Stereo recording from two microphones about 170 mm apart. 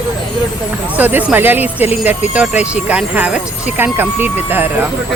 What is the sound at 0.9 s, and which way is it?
Speech, 10° right (ahead or behind).